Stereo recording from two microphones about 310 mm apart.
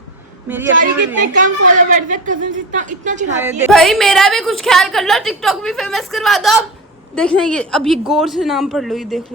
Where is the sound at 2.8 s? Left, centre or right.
Right.